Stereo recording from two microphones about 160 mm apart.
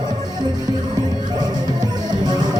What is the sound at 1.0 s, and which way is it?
Music, 25° right (ahead or behind).